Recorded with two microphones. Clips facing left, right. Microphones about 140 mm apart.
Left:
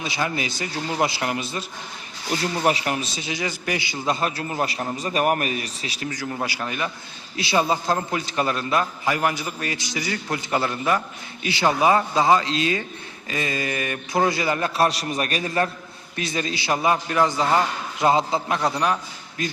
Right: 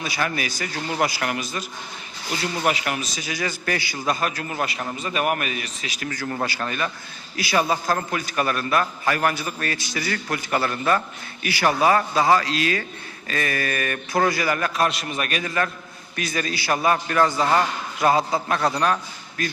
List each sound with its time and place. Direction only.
0.0 s a man's voice: 20° left (ahead or behind)
2.6 s a man's voice: 30° left (ahead or behind)
6.1 s a man's voice: 15° left (ahead or behind)